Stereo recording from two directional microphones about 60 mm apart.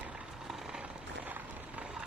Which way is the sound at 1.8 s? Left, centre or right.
Centre.